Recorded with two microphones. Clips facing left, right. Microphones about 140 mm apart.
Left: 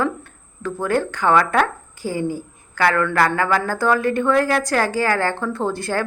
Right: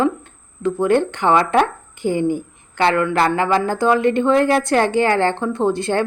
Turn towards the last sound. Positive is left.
turn(degrees=-20)  # may be behind; listen again after turning